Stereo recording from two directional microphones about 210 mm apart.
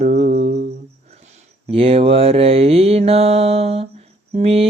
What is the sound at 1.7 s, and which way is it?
Mantra, 25° right (ahead or behind).